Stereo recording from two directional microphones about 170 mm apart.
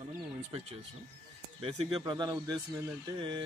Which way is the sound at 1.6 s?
30° right (ahead or behind).